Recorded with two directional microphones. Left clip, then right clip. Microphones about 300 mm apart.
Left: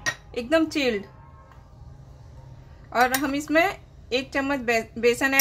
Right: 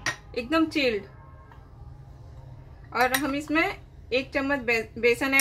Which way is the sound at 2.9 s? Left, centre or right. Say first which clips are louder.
Left 2 dB; centre.